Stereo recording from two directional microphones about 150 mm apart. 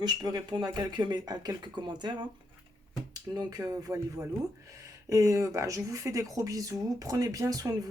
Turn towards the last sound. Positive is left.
turn(degrees=-25)  # may be behind; listen again after turning